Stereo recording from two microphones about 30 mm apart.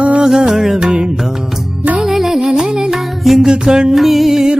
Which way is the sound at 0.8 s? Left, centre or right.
Right.